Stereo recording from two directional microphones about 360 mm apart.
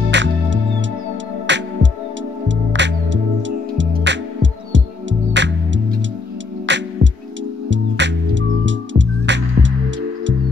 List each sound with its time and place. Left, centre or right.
0.1 s music: right